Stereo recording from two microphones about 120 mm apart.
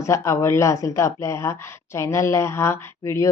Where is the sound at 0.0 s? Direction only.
25° left (ahead or behind).